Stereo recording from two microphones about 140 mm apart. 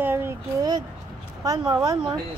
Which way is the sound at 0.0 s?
15° right (ahead or behind).